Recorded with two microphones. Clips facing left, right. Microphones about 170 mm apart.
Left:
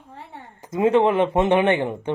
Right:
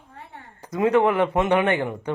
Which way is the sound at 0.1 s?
25° left (ahead or behind).